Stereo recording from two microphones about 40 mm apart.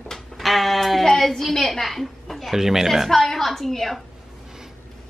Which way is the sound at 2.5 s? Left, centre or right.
Centre.